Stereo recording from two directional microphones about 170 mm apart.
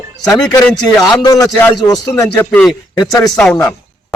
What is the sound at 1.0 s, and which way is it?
Speech, 25° left (ahead or behind).